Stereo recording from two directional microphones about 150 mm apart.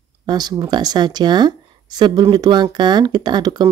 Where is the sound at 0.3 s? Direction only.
25° right (ahead or behind).